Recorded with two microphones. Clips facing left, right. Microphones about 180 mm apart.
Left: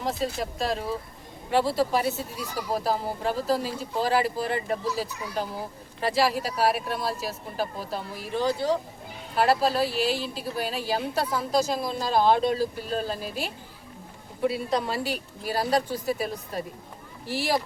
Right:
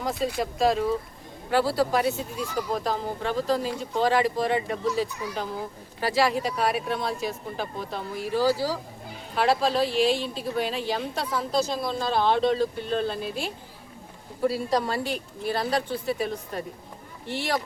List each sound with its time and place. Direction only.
0.0 s speech: centre (ahead or behind)